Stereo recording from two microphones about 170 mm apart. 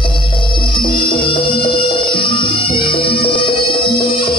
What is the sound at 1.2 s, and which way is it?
Music, 30° left (ahead or behind).